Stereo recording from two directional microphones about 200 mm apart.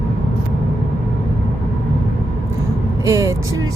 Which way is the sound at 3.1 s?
15° right (ahead or behind).